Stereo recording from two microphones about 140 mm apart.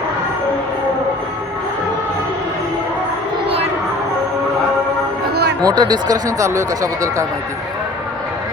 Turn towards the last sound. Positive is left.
turn(degrees=-25)  # may be behind; listen again after turning